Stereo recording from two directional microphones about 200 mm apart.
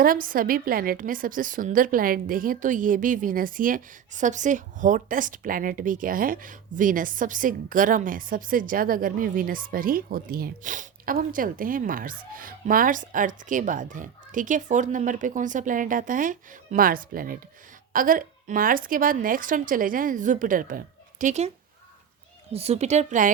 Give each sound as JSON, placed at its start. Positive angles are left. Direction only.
{"t": 0.0, "sound": "a woman's voice", "side_deg": -45}
{"t": 22.5, "sound": "a woman's voice", "side_deg": -30}